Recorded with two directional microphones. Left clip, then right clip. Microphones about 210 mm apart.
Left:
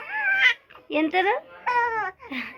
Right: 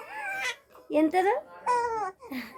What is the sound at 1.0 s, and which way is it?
Babbling, centre (ahead or behind).